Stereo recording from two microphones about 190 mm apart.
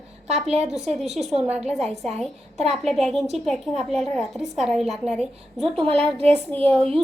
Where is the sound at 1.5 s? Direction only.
35° right (ahead or behind).